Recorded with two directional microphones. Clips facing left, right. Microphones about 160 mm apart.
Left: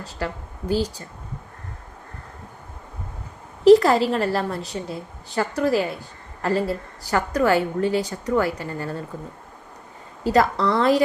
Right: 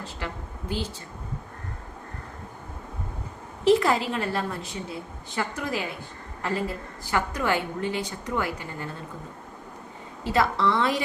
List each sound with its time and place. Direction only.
0.7 s a woman's voice: 40° left (ahead or behind)
3.6 s a woman's voice: 40° left (ahead or behind)
10.2 s a woman's voice: 40° left (ahead or behind)